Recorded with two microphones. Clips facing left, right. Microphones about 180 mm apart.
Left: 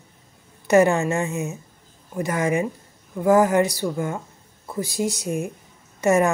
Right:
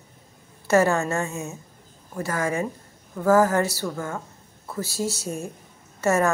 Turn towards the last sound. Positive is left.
turn(degrees=15)  # may be behind; listen again after turning